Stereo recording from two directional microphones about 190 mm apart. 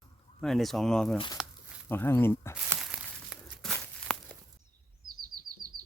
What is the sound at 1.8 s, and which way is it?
Speech, 10° left (ahead or behind).